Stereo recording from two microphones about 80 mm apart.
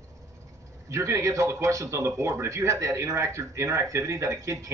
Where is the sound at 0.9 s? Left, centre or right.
Right.